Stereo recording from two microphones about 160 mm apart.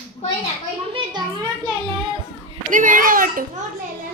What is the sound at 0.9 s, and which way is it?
A child's voice, 30° right (ahead or behind).